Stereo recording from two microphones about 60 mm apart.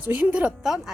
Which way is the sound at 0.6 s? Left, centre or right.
Centre.